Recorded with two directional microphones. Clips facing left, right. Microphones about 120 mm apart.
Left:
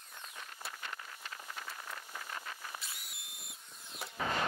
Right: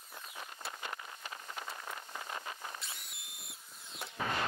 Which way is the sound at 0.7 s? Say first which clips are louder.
Right 3 dB; 20° right (ahead or behind).